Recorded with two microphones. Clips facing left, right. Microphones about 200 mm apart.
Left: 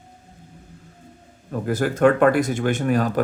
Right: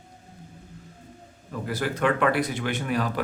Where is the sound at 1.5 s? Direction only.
45° left (ahead or behind).